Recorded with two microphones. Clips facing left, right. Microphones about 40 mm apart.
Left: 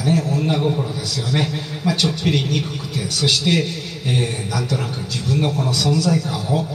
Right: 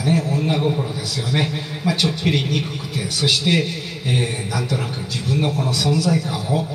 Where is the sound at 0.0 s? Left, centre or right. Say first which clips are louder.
Left 1 dB; centre.